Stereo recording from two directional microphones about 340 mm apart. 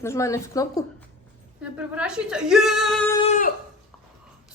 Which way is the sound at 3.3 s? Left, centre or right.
Left.